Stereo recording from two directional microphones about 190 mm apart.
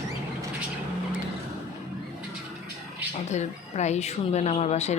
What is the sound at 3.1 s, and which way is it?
A woman's voice, 35° left (ahead or behind).